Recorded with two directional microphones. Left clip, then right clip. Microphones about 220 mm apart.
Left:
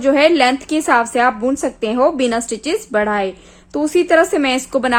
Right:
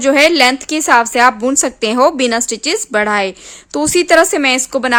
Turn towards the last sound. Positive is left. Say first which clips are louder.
# right 3 dB
turn(degrees=-20)  # may be behind; listen again after turning